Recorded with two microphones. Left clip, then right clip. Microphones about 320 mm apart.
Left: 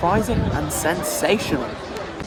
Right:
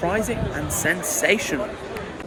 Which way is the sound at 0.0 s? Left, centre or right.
Centre.